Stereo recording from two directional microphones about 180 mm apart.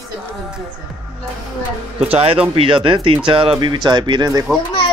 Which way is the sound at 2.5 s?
30° right (ahead or behind).